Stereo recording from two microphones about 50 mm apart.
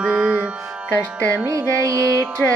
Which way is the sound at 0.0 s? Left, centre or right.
Centre.